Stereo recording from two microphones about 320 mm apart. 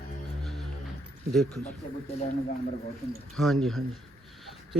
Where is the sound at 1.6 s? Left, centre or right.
Centre.